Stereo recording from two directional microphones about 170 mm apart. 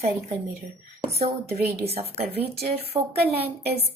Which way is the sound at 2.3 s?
70° right (ahead or behind).